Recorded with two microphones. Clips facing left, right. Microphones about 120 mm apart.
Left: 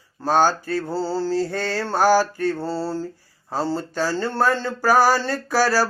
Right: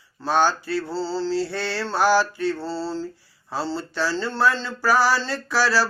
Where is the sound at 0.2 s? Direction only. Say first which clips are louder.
Left 2 dB; 45° left (ahead or behind).